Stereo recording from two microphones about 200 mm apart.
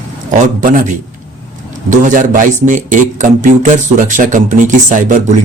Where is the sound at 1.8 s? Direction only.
40° right (ahead or behind).